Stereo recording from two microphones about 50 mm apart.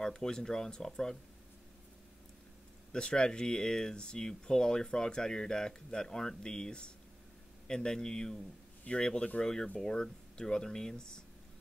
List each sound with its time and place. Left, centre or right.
0.0 s speech: centre
2.9 s speech: centre